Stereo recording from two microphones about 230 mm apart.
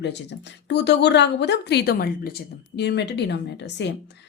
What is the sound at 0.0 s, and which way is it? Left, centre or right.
A woman's voice, left.